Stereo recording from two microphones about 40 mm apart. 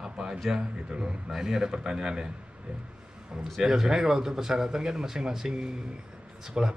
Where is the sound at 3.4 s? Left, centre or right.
Centre.